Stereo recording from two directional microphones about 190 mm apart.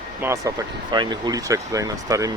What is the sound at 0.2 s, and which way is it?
Speech, 15° right (ahead or behind).